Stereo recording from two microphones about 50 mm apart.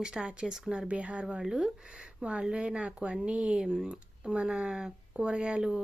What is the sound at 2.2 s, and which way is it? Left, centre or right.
Speech, right.